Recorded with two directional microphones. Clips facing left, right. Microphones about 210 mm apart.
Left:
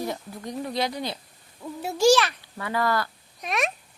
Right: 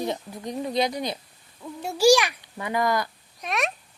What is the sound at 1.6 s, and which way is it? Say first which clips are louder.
Speech: left 1 dB; 5° left (ahead or behind).